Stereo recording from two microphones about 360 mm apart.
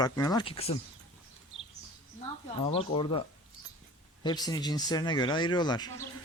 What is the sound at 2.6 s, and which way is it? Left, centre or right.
Speech, centre.